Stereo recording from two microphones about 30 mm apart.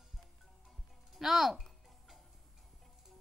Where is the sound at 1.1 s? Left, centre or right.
Centre.